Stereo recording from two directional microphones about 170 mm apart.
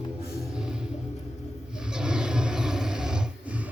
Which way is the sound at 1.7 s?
5° right (ahead or behind).